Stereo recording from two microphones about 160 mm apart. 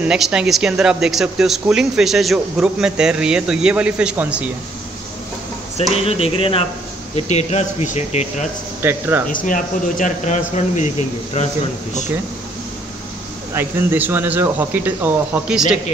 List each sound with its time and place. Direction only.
0.1 s speech: 5° right (ahead or behind)
6.0 s speech: 40° left (ahead or behind)
8.8 s speech: 15° right (ahead or behind)
9.3 s speech: 60° left (ahead or behind)
13.5 s speech: 15° right (ahead or behind)